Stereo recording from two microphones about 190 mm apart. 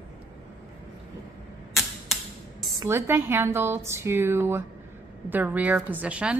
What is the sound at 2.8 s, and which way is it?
A woman's voice, 15° right (ahead or behind).